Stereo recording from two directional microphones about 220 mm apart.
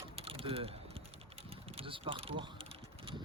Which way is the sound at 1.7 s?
25° right (ahead or behind).